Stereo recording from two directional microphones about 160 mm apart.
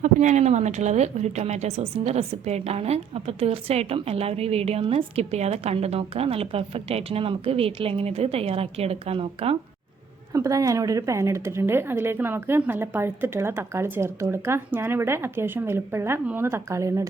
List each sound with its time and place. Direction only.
0.0 s a woman's voice: 50° right (ahead or behind)
10.3 s a woman's voice: 20° right (ahead or behind)